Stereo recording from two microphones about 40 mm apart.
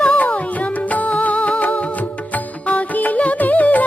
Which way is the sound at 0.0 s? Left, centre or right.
Left.